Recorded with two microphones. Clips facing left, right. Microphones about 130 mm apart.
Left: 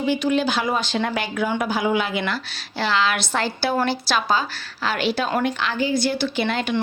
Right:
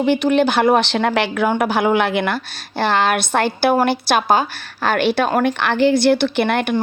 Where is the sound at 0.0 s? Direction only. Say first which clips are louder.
Right 5 dB; 65° right (ahead or behind).